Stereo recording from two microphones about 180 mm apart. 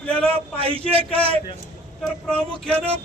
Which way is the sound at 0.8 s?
30° right (ahead or behind).